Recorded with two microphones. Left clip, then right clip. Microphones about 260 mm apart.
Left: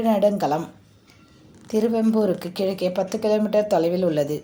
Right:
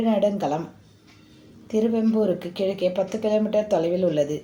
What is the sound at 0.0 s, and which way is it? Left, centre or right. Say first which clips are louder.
Speech: left 3 dB; left.